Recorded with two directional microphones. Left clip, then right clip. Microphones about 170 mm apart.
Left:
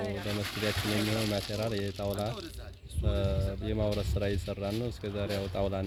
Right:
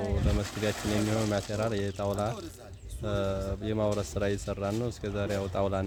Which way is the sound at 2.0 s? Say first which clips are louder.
Right 3 dB; 15° right (ahead or behind).